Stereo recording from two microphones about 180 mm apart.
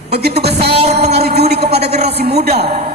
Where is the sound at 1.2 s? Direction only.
60° right (ahead or behind).